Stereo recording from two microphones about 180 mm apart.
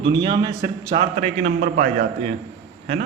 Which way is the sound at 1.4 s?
50° right (ahead or behind).